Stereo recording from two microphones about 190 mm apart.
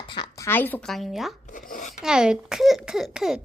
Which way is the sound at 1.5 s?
45° left (ahead or behind).